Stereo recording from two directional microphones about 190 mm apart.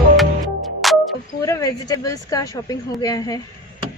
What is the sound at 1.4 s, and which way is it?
Speech, 20° left (ahead or behind).